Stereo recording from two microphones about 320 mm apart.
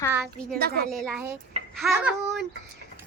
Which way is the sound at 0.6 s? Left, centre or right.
Right.